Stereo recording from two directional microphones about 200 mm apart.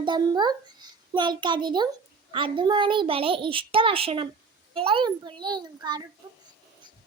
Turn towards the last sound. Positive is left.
turn(degrees=-20)  # may be behind; listen again after turning